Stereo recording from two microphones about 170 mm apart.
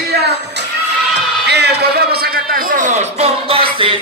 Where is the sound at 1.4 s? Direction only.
75° right (ahead or behind); by 3.6 s 35° right (ahead or behind).